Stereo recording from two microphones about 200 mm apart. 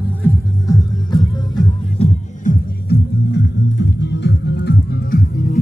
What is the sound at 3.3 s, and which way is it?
Music, 60° left (ahead or behind).